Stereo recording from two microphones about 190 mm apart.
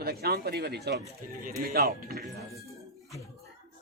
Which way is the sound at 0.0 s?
55° right (ahead or behind).